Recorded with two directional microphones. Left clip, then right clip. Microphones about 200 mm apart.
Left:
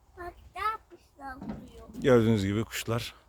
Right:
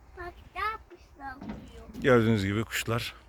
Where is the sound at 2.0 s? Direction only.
10° left (ahead or behind).